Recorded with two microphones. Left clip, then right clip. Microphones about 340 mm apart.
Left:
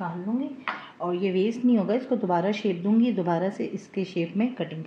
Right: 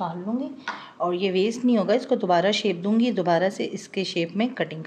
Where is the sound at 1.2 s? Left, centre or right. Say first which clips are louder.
Even; right.